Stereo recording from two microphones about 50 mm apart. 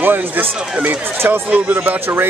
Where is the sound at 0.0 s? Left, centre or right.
Right.